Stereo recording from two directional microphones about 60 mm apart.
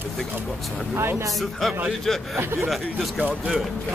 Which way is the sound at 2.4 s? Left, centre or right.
Right.